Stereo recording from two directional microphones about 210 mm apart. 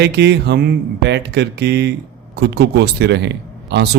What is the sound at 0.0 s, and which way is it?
Speech, 50° right (ahead or behind).